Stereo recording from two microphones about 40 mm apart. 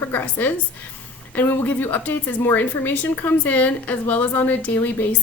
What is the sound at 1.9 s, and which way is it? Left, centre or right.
A woman's voice, left.